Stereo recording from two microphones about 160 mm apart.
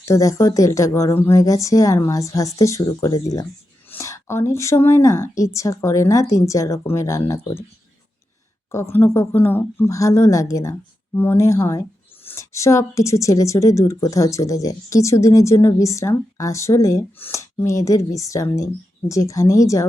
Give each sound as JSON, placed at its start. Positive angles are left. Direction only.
{"t": 0.0, "sound": "a woman's voice", "side_deg": 20}
{"t": 8.7, "sound": "speech", "side_deg": 15}